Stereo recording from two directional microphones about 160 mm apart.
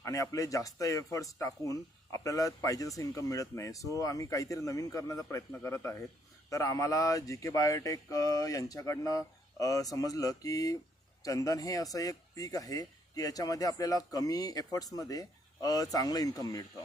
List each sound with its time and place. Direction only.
0.0 s speech: 20° left (ahead or behind)